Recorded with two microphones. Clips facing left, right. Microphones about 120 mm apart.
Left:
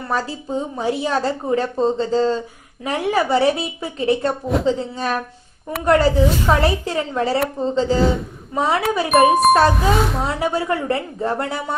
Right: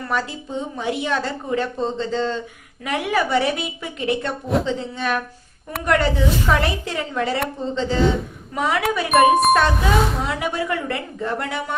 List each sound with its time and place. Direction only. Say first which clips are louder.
0.1 s speech: left 3 dB; 35° left (ahead or behind)
9.8 s speech: left 1 dB; centre (ahead or behind)
10.2 s speech: left 3 dB; 30° left (ahead or behind)